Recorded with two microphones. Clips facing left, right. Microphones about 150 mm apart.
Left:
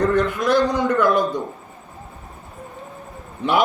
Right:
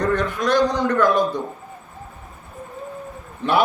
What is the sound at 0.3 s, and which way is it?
Speech, 10° left (ahead or behind).